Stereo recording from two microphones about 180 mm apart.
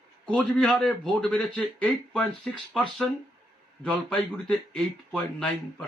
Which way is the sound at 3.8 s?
5° left (ahead or behind).